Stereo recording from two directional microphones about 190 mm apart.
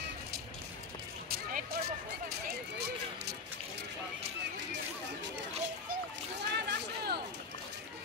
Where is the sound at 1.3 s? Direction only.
55° right (ahead or behind).